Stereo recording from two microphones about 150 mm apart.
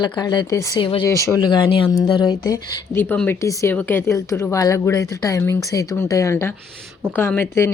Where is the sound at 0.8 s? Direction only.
35° left (ahead or behind).